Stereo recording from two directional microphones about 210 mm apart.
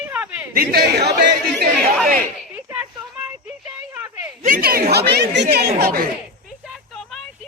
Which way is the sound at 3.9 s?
10° right (ahead or behind).